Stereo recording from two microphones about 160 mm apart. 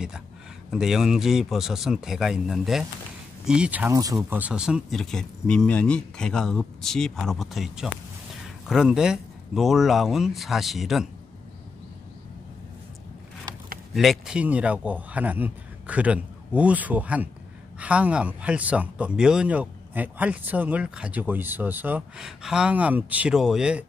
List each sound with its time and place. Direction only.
0.7 s speech: 5° right (ahead or behind)
3.9 s speech: 20° right (ahead or behind)
4.4 s speech: 5° right (ahead or behind)
13.9 s speech: centre (ahead or behind)